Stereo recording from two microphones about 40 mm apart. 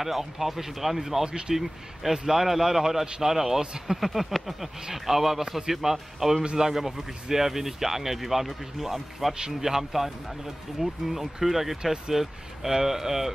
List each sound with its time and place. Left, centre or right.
0.0 s speech: centre
1.5 s a sound: centre
2.1 s speech: centre
3.7 s a sound: centre
4.9 s speech: centre
6.4 s speech: right
6.7 s speech: centre